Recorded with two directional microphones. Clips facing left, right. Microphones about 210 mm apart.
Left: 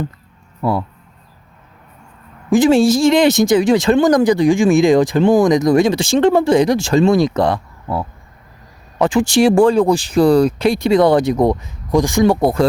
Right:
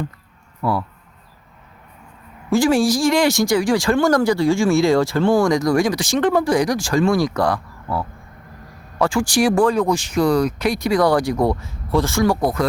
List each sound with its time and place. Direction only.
0.6 s speech: 25° left (ahead or behind)
2.5 s speech: 20° left (ahead or behind)